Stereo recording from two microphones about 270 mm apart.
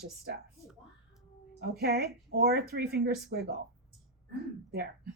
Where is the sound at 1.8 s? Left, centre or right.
Right.